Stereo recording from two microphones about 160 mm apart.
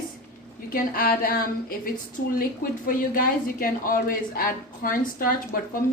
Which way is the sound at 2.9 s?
65° left (ahead or behind).